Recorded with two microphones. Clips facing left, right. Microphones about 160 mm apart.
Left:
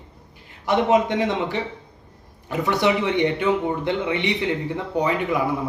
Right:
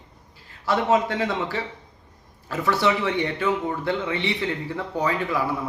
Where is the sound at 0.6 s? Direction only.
20° left (ahead or behind).